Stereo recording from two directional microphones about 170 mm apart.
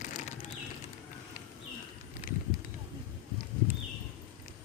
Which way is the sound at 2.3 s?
55° left (ahead or behind).